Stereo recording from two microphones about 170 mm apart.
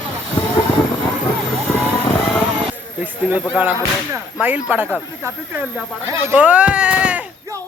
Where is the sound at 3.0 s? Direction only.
10° right (ahead or behind).